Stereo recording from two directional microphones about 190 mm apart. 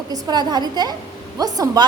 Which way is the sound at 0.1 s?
20° right (ahead or behind).